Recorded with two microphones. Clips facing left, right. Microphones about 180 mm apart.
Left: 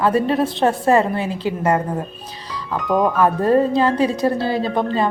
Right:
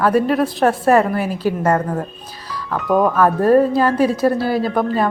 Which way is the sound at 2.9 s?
Centre (ahead or behind).